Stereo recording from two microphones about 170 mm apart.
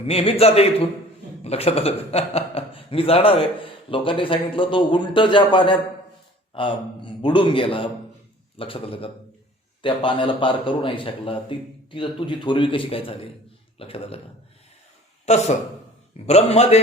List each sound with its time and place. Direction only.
0.1 s a man's voice: 35° left (ahead or behind)
15.3 s a man's voice: 40° left (ahead or behind)